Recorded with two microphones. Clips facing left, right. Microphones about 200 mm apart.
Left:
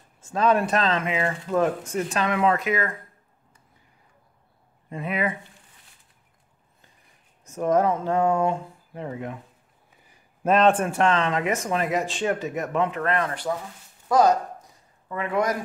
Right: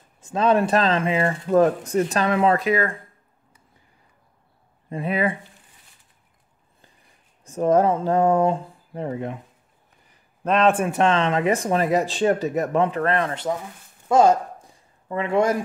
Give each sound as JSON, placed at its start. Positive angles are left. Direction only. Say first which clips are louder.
{"t": 0.2, "sound": "speech", "louder": "right 2 dB", "side_deg": -20}
{"t": 4.8, "sound": "speech", "louder": "right 4 dB", "side_deg": -30}
{"t": 7.4, "sound": "speech", "louder": "right 3 dB", "side_deg": -30}
{"t": 10.4, "sound": "a man's voice", "louder": "even", "side_deg": 0}
{"t": 10.9, "sound": "speech", "louder": "right 2 dB", "side_deg": -20}
{"t": 14.0, "sound": "a sound", "louder": "right 3 dB", "side_deg": -25}